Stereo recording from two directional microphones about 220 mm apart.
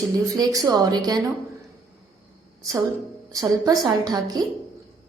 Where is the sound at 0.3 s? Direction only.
15° right (ahead or behind).